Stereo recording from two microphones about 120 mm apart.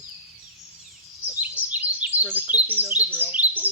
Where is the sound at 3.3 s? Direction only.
15° right (ahead or behind).